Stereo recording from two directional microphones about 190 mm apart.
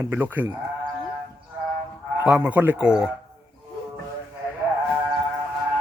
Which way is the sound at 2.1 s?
5° right (ahead or behind).